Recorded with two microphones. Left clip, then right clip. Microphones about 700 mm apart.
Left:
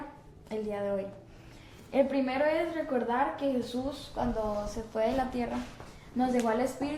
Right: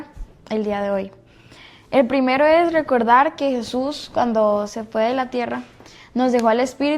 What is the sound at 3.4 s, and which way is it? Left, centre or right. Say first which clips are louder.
Speech: right 10 dB; right.